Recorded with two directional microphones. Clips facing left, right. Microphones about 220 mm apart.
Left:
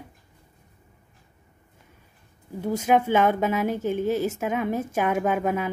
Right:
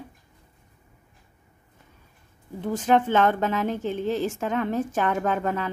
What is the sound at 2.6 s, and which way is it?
A woman's voice, 10° left (ahead or behind).